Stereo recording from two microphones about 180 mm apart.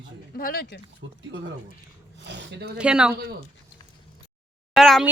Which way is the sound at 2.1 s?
80° right.